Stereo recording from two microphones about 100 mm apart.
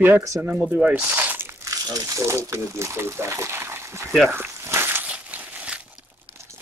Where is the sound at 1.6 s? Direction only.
35° right (ahead or behind).